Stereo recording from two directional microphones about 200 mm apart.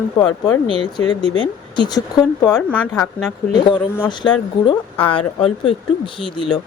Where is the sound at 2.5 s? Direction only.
5° left (ahead or behind).